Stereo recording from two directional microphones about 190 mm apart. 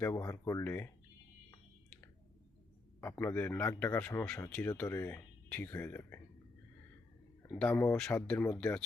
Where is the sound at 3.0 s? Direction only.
10° left (ahead or behind).